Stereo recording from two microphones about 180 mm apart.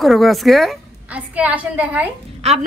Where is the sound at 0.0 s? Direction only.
Centre (ahead or behind).